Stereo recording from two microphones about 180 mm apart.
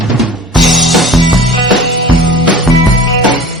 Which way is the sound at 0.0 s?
Centre (ahead or behind).